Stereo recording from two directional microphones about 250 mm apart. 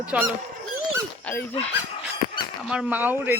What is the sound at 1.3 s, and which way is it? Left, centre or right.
Speech, centre.